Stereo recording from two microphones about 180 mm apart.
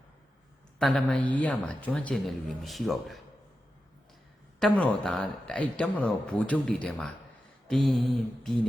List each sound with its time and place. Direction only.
0.8 s speech: centre (ahead or behind)
4.6 s speech: 5° left (ahead or behind)